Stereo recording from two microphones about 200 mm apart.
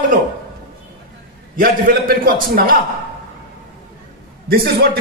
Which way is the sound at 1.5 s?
45° right (ahead or behind).